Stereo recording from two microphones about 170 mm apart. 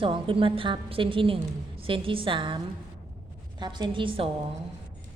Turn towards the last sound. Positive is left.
turn(degrees=-30)  # may be behind; listen again after turning